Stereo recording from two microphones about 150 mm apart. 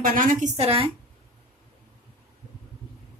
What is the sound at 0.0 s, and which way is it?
Speech, 65° right (ahead or behind).